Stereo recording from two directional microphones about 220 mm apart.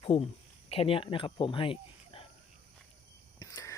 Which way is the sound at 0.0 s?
25° left (ahead or behind).